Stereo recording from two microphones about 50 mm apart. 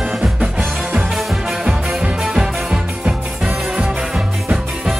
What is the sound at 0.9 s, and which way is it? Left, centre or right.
Music, centre.